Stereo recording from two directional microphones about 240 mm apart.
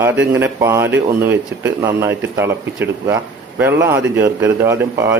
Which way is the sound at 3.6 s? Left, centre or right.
Centre.